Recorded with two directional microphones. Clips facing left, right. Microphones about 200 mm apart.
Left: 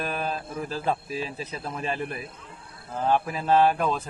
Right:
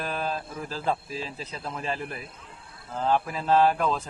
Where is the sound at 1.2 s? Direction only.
20° left (ahead or behind).